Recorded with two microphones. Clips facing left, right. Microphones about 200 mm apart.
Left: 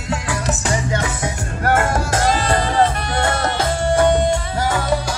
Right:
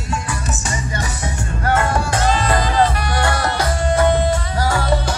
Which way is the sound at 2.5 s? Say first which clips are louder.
Even; 25° left (ahead or behind).